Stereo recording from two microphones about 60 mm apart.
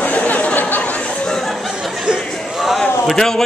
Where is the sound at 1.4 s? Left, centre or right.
Centre.